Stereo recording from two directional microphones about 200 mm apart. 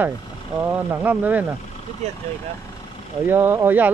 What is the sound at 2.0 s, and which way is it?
Speech, 35° right (ahead or behind).